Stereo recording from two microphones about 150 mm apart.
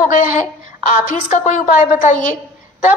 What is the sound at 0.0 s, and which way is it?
A woman's voice, 55° left (ahead or behind).